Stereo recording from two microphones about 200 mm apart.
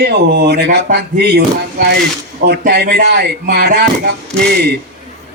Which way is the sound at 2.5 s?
55° right (ahead or behind).